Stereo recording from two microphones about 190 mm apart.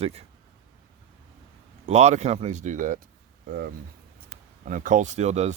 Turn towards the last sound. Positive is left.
turn(degrees=-35)  # may be behind; listen again after turning